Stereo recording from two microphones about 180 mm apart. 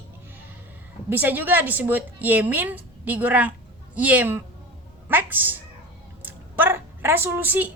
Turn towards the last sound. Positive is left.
turn(degrees=-10)  # may be behind; listen again after turning